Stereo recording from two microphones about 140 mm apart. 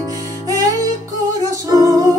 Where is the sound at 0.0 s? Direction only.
25° right (ahead or behind).